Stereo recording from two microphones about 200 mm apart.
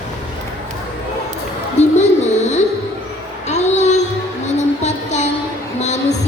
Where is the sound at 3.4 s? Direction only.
35° left (ahead or behind).